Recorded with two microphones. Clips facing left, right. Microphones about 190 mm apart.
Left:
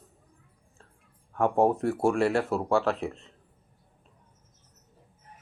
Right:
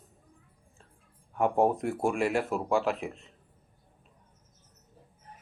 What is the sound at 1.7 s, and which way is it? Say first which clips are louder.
A man's voice: left 4 dB; 15° right (ahead or behind).